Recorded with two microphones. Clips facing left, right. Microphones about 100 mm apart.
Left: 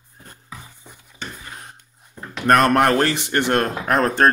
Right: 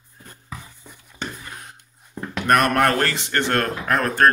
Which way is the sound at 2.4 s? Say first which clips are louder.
Left 3 dB; 30° left (ahead or behind).